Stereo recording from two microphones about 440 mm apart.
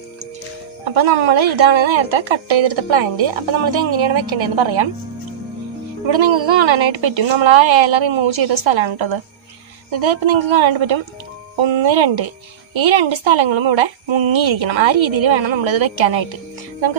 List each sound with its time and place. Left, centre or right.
0.8 s a woman's voice: right
6.0 s a woman's voice: right